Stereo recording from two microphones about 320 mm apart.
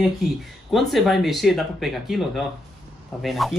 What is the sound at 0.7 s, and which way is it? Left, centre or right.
Speech, centre.